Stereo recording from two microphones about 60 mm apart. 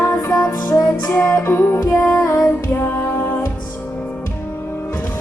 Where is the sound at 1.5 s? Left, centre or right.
Left.